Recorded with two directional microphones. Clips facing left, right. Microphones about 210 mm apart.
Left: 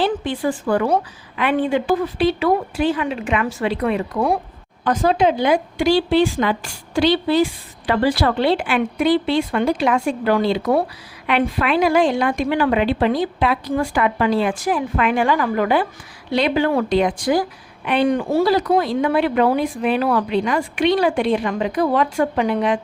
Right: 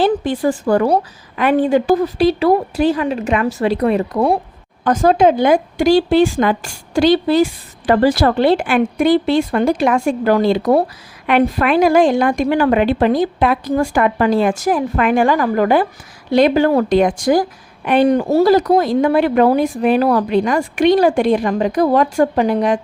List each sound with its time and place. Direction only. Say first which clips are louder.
0.0 s a woman's voice: right 5 dB; 45° right (ahead or behind)